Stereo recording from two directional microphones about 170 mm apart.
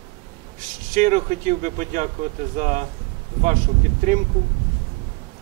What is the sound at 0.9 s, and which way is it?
Speech, 45° right (ahead or behind).